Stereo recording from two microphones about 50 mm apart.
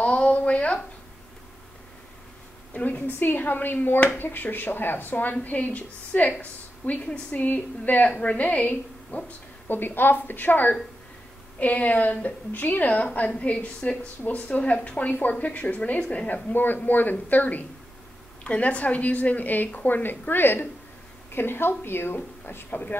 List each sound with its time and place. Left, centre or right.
0.0 s a sound: left
2.7 s a woman's voice: left
9.7 s a woman's voice: left
16.5 s speech: left
18.4 s a woman's voice: left